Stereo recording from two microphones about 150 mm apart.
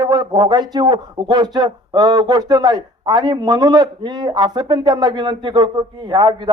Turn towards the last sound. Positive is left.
turn(degrees=-30)  # may be behind; listen again after turning